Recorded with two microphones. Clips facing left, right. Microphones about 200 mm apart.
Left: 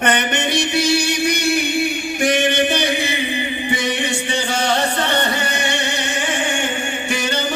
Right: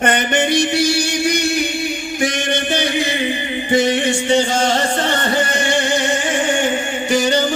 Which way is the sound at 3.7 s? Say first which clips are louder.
Right 11 dB; 60° left (ahead or behind).